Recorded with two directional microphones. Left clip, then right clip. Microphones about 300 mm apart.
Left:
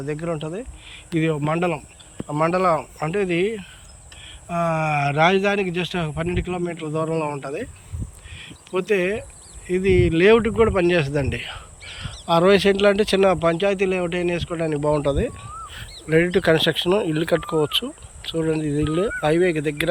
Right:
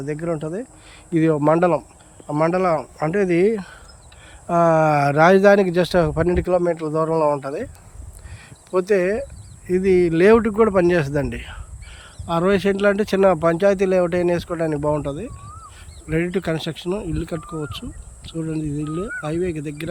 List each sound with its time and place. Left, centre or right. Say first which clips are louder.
0.0 s speech: right 2 dB; centre